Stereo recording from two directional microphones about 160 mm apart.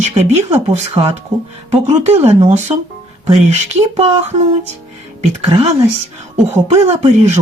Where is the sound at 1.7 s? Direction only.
40° right (ahead or behind).